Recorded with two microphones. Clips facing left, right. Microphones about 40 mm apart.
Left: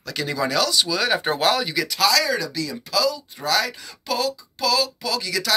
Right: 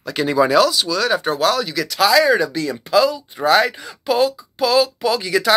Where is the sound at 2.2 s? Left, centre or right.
Right.